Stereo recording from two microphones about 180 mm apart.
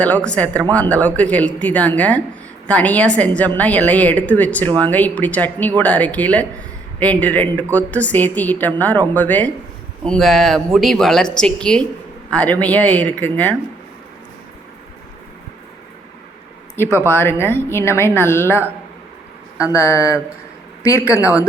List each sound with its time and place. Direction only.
0.0 s a woman's voice: 5° left (ahead or behind)
17.1 s a woman's voice: 10° left (ahead or behind)
19.7 s a woman's voice: 15° left (ahead or behind)
21.2 s a woman's voice: 10° right (ahead or behind)